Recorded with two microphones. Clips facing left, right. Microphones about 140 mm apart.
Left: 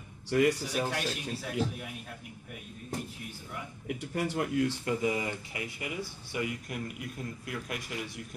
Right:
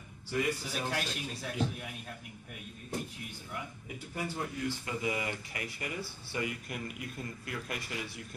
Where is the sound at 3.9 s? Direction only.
75° left (ahead or behind).